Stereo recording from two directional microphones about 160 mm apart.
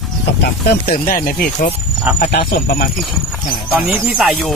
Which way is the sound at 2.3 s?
80° left.